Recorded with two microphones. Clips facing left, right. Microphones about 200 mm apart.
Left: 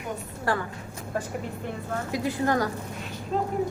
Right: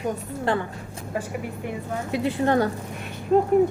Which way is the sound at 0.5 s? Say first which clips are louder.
Right 3 dB; 25° right (ahead or behind).